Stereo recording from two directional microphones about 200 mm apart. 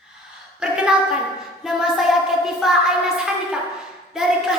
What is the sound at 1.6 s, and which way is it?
Music, centre (ahead or behind).